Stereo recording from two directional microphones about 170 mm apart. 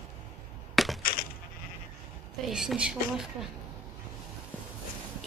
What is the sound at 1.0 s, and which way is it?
Coin, 55° left (ahead or behind).